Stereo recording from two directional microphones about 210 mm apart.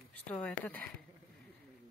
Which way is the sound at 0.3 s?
5° left (ahead or behind).